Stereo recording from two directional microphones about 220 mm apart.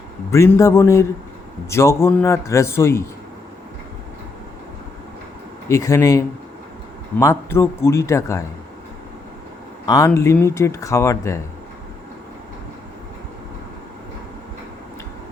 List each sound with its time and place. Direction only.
0.3 s a man's voice: 10° left (ahead or behind)
5.6 s a man's voice: 15° left (ahead or behind)
9.8 s a man's voice: 15° left (ahead or behind)